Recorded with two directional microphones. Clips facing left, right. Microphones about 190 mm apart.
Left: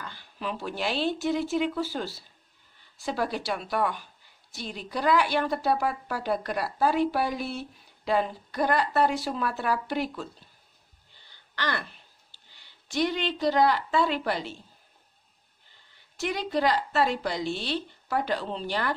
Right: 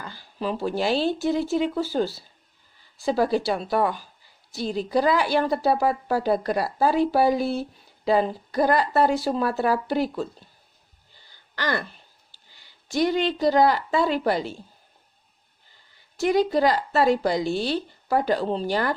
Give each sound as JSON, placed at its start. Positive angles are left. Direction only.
{"t": 0.0, "sound": "a woman's voice", "side_deg": -35}
{"t": 11.5, "sound": "a woman's voice", "side_deg": -40}
{"t": 16.2, "sound": "a woman's voice", "side_deg": -40}